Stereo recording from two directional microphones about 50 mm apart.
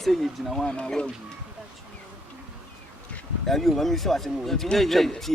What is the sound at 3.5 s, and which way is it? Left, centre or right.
Speech, centre.